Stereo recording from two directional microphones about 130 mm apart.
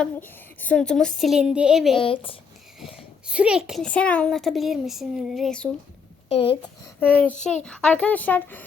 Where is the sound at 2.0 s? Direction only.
45° left (ahead or behind).